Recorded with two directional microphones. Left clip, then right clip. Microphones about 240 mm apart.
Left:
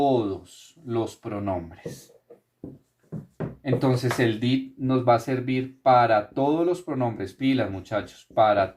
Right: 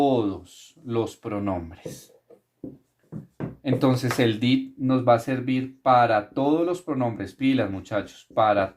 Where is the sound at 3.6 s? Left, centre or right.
Right.